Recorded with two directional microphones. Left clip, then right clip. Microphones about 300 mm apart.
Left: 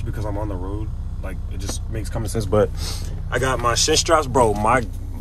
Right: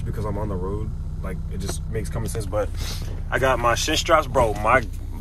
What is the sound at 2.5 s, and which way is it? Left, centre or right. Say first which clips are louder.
Speech: left 8 dB; left.